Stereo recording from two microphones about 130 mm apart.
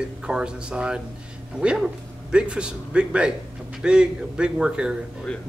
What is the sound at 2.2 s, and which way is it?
Speech, 5° right (ahead or behind).